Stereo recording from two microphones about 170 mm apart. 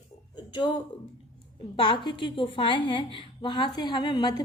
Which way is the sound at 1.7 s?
30° left (ahead or behind).